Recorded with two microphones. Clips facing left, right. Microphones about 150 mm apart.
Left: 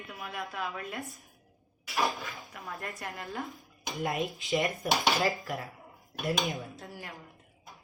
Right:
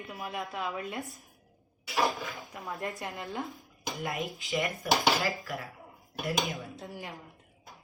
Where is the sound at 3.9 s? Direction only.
20° left (ahead or behind).